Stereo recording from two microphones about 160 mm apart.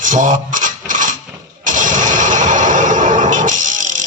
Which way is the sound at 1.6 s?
55° right (ahead or behind).